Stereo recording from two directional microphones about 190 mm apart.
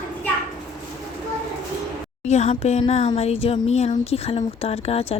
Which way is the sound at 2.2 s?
35° left (ahead or behind).